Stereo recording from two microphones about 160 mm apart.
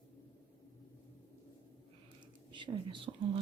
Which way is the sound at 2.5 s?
30° right (ahead or behind).